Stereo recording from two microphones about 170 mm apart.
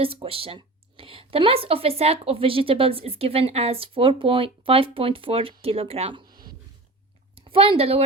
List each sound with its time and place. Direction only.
0.0 s speech: 35° right (ahead or behind)
7.3 s a woman's voice: 35° right (ahead or behind)